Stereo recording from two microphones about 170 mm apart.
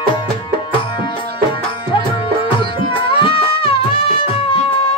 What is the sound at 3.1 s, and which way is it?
Music, 30° left (ahead or behind).